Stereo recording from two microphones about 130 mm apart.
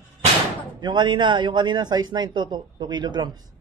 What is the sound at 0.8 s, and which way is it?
A man's voice, 35° right (ahead or behind).